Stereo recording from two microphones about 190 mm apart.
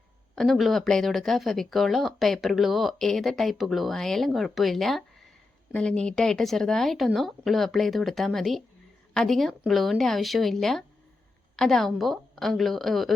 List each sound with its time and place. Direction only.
0.3 s speech: centre (ahead or behind)